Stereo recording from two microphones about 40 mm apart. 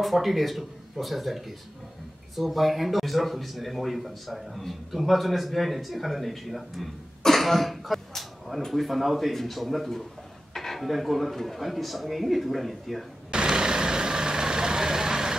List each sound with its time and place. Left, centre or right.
0.0 s speech: centre
13.3 s vehicle: centre